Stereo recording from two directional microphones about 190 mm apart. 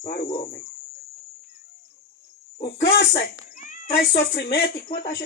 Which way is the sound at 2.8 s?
60° left (ahead or behind).